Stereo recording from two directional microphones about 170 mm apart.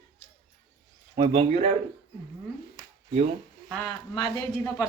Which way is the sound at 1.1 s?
30° right (ahead or behind).